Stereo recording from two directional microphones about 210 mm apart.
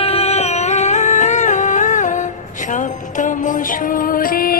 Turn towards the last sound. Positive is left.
turn(degrees=45)  # may be behind; listen again after turning